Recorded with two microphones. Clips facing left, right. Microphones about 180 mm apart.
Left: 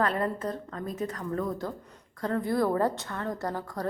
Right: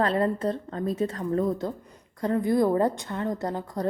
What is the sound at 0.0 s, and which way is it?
A woman's voice, 30° right (ahead or behind).